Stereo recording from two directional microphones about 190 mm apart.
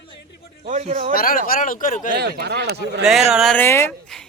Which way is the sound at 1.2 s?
50° left (ahead or behind).